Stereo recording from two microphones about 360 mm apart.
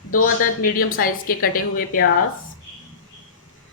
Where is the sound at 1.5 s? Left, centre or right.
Left.